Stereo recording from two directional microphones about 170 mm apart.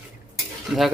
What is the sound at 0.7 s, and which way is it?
Speech, 5° right (ahead or behind).